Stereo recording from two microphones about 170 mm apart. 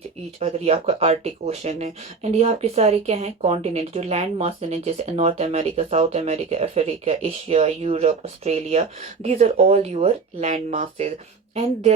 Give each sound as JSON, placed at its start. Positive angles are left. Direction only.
{"t": 0.3, "sound": "speech", "side_deg": -40}